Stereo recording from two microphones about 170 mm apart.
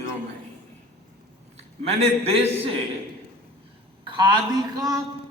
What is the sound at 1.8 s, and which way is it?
Speech, 35° right (ahead or behind).